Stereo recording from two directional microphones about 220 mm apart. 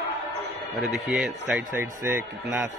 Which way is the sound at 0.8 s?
Centre (ahead or behind).